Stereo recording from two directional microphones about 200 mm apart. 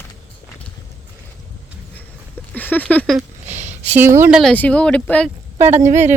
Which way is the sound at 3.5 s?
35° right (ahead or behind).